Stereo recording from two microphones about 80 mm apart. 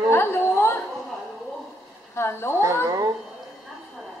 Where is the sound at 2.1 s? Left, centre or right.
Left.